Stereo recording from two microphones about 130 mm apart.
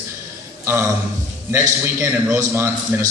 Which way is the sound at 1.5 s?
25° right (ahead or behind).